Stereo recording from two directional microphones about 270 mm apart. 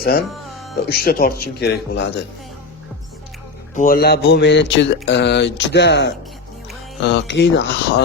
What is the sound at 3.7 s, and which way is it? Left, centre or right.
Speech, left.